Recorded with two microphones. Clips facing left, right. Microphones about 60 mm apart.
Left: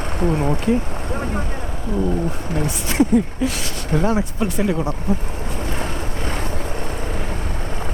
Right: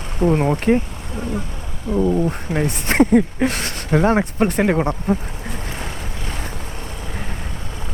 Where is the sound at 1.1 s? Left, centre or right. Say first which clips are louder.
Left 1 dB; left.